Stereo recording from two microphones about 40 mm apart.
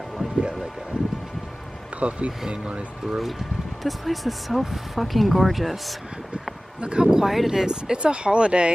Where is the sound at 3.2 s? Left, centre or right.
Centre.